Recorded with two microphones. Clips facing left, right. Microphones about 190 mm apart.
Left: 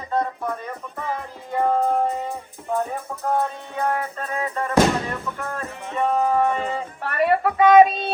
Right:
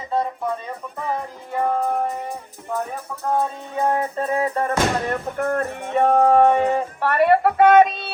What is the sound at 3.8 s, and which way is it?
Music, 30° right (ahead or behind).